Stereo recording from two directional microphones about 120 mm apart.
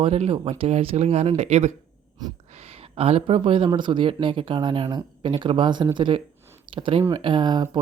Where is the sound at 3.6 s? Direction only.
40° right (ahead or behind).